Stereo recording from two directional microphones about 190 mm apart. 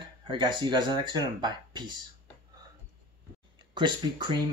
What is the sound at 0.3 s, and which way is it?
Speech, 25° right (ahead or behind).